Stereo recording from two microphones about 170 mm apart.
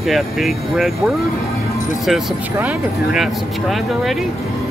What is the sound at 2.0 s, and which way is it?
Speech, 5° right (ahead or behind).